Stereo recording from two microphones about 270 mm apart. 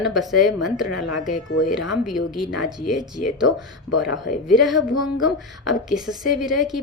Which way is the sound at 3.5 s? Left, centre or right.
Left.